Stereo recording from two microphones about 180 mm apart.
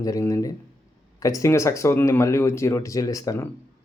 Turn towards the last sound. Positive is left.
turn(degrees=20)  # may be behind; listen again after turning